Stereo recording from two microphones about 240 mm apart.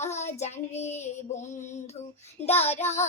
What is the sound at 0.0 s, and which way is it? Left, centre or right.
Child singing, left.